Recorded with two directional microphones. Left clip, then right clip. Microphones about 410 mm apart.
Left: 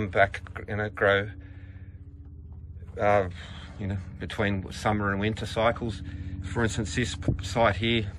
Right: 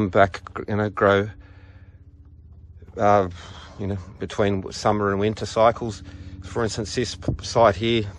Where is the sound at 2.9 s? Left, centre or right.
Centre.